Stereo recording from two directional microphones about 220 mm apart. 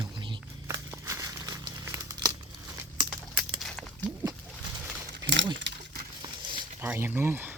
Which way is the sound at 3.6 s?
Centre (ahead or behind).